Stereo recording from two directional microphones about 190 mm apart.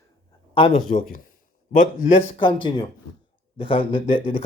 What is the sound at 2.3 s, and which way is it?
Speech, 25° left (ahead or behind).